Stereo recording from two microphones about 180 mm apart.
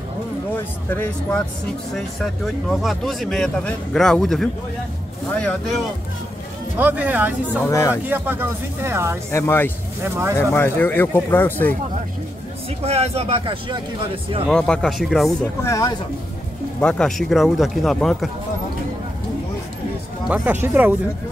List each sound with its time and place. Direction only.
2.0 s speech: centre (ahead or behind)
6.8 s speech: 10° right (ahead or behind)
7.6 s speech: 15° left (ahead or behind)
7.9 s speech: 10° right (ahead or behind)
9.3 s speech: 15° left (ahead or behind)
10.0 s speech: 15° right (ahead or behind)
10.3 s speech: 15° left (ahead or behind)
12.8 s speech: 35° right (ahead or behind)
14.5 s speech: 5° left (ahead or behind)
15.6 s speech: 15° left (ahead or behind)
16.8 s speech: centre (ahead or behind)
20.2 s speech: 10° right (ahead or behind)